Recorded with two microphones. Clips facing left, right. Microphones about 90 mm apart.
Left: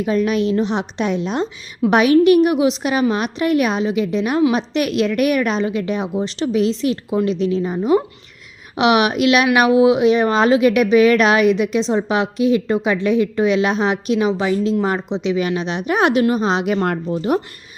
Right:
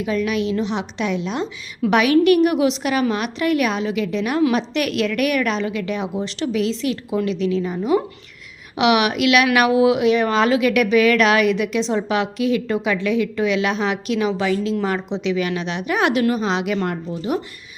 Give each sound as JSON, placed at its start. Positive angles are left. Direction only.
{"t": 0.0, "sound": "a woman's voice", "side_deg": 35}
{"t": 16.8, "sound": "speech", "side_deg": 55}